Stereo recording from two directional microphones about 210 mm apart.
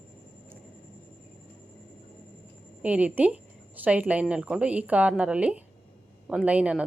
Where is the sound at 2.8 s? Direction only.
5° right (ahead or behind).